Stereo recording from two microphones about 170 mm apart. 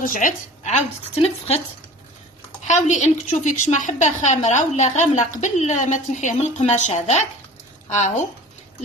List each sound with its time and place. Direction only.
0.0 s a woman's voice: 50° left (ahead or behind)
2.6 s a woman's voice: 45° left (ahead or behind)